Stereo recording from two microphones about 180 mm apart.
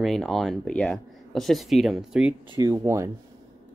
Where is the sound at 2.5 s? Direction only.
15° right (ahead or behind).